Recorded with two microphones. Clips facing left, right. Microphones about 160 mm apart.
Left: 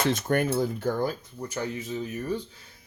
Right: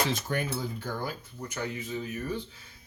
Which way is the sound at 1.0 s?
35° left (ahead or behind).